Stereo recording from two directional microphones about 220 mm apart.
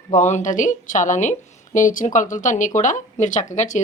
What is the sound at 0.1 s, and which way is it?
Speech, 35° left (ahead or behind).